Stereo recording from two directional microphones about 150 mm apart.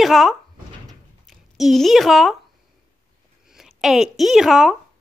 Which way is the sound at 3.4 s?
5° right (ahead or behind).